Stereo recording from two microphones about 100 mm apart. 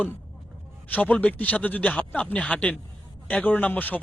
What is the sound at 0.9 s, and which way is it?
Speech, 15° left (ahead or behind).